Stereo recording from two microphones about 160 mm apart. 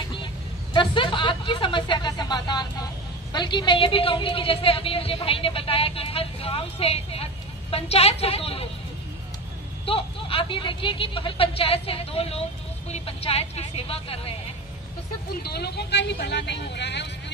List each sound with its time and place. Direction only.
0.7 s a woman's voice: 30° left (ahead or behind)
9.8 s a woman's voice: 35° left (ahead or behind)
15.4 s speech: 90° left